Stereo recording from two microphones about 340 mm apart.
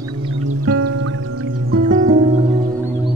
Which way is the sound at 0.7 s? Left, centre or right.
Right.